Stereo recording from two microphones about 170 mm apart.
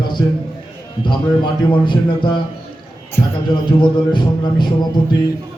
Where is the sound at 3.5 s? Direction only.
25° left (ahead or behind).